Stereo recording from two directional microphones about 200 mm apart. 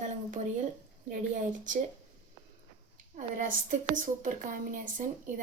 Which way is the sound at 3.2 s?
40° right (ahead or behind).